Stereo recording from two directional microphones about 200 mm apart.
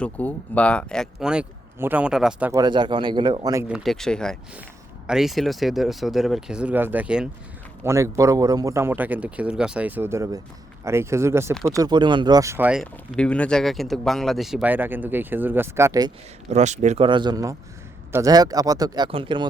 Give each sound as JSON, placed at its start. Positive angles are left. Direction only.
{"t": 0.0, "sound": "speech", "side_deg": 5}
{"t": 2.5, "sound": "speech", "side_deg": -20}
{"t": 3.7, "sound": "speech", "side_deg": 0}
{"t": 16.5, "sound": "speech", "side_deg": -35}